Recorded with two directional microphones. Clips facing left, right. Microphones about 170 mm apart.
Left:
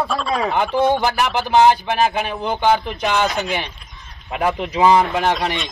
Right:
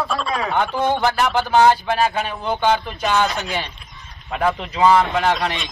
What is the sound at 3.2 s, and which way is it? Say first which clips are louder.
Speech: left 2 dB; centre (ahead or behind).